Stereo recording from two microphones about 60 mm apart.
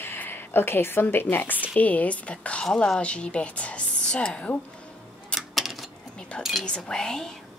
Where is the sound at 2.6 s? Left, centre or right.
Centre.